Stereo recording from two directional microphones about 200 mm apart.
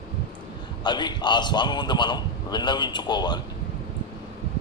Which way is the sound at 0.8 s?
20° left (ahead or behind).